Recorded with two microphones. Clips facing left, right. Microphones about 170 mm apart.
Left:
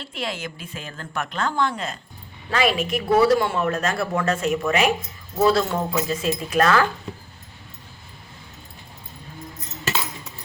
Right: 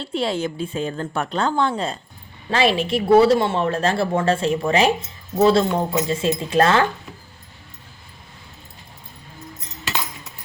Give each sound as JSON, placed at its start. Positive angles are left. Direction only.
{"t": 0.0, "sound": "a woman's voice", "side_deg": -30}